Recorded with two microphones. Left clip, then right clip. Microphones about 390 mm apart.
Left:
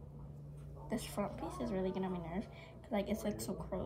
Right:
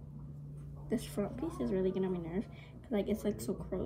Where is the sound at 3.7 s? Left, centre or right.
Left.